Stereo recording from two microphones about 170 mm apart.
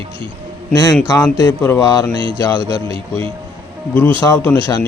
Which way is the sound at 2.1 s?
30° right (ahead or behind).